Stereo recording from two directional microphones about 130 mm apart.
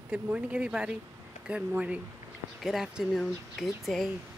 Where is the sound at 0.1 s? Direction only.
10° right (ahead or behind).